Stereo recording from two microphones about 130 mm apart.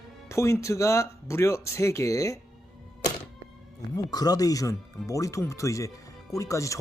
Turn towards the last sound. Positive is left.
turn(degrees=25)  # may be behind; listen again after turning